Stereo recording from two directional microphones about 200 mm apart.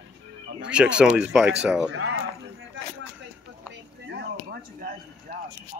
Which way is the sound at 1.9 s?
80° right.